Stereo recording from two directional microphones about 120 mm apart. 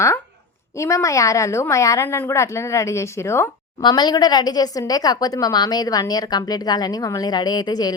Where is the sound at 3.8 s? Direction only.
35° left (ahead or behind).